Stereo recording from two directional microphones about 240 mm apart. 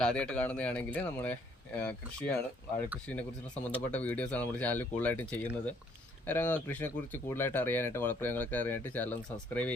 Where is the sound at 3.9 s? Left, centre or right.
Centre.